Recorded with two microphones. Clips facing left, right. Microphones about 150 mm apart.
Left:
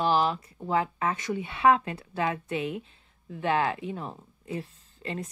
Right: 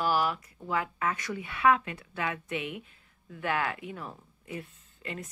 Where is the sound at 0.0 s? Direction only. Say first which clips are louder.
Left 3 dB; 25° left (ahead or behind).